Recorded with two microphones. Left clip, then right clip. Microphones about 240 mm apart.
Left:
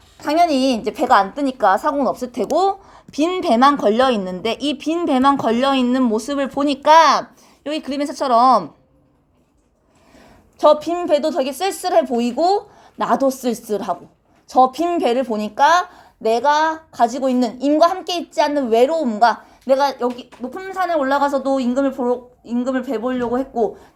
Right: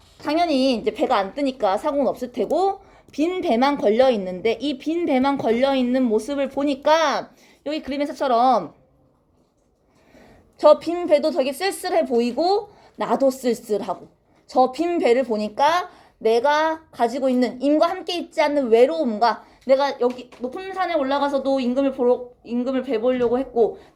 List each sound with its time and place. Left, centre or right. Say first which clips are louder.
0.2 s a woman's voice: left 4 dB; left
10.6 s a woman's voice: left 1 dB; centre
13.1 s a woman's voice: even; left
13.7 s a woman's voice: left 2 dB; centre